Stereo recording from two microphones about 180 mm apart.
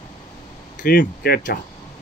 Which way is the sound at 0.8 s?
60° left (ahead or behind).